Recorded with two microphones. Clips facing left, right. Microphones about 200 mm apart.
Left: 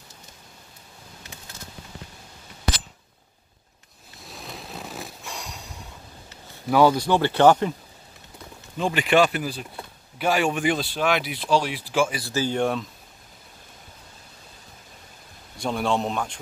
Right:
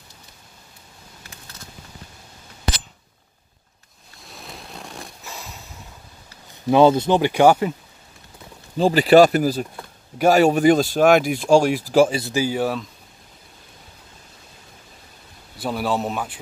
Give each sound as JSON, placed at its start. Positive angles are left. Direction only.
{"t": 4.2, "sound": "a sound", "side_deg": 0}
{"t": 6.7, "sound": "speech", "side_deg": -25}
{"t": 8.7, "sound": "speech", "side_deg": -35}
{"t": 12.1, "sound": "speech", "side_deg": -20}
{"t": 12.4, "sound": "a man's voice", "side_deg": -5}
{"t": 15.5, "sound": "a man's voice", "side_deg": -5}